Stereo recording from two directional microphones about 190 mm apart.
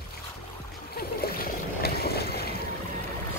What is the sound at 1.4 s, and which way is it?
Boat, 55° left (ahead or behind).